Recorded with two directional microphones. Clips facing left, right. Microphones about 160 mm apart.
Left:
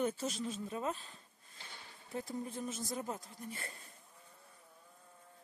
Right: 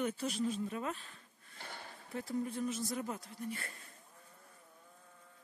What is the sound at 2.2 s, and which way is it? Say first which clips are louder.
Speech: right 8 dB; 25° left (ahead or behind).